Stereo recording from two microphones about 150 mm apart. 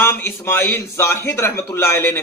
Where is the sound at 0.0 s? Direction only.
15° left (ahead or behind).